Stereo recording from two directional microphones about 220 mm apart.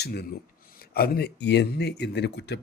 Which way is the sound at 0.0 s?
45° left (ahead or behind).